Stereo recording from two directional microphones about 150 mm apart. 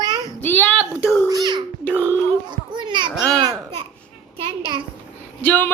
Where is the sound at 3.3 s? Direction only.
25° right (ahead or behind).